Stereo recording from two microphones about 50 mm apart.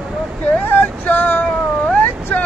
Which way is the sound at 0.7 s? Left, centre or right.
Left.